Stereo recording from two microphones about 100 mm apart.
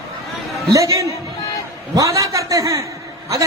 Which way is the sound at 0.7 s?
30° right (ahead or behind).